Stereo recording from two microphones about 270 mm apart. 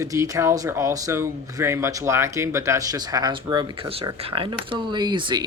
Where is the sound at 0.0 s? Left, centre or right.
Centre.